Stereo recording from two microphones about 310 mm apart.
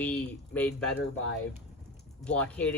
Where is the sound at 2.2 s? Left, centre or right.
Centre.